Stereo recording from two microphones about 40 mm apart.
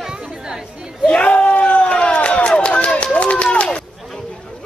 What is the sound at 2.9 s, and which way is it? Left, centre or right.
Run, left.